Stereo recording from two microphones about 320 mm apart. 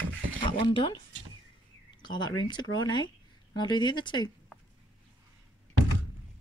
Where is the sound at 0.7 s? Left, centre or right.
Centre.